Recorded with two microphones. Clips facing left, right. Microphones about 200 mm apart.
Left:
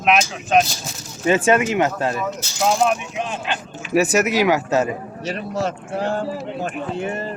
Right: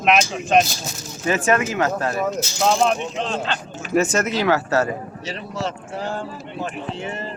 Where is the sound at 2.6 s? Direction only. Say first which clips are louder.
Even; 10° left (ahead or behind).